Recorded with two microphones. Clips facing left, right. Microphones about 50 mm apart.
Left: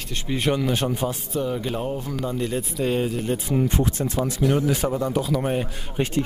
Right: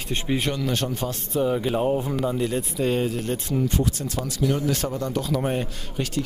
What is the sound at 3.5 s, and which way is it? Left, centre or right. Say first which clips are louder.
Speech: left 1 dB; left.